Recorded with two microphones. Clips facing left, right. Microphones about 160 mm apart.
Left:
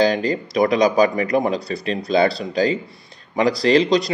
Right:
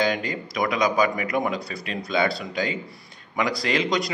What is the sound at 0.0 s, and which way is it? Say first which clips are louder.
Speech: left 7 dB; 35° left (ahead or behind).